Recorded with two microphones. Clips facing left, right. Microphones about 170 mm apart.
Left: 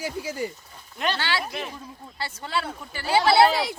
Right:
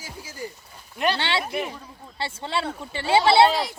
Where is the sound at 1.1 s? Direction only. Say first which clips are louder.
Right 3 dB; 25° right (ahead or behind).